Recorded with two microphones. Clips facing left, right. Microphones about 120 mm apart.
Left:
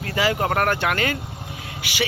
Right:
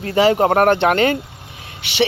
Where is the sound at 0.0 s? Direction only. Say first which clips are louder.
Right 8 dB; 25° right (ahead or behind).